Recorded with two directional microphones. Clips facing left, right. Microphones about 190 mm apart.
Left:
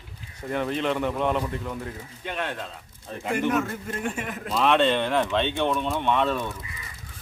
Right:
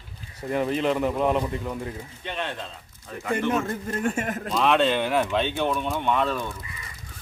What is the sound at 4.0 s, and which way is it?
Speech, 45° right (ahead or behind).